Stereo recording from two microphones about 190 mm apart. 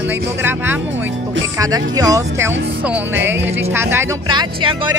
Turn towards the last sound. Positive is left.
turn(degrees=-25)  # may be behind; listen again after turning